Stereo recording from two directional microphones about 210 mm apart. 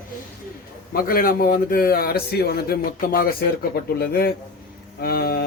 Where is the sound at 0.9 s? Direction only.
45° left (ahead or behind).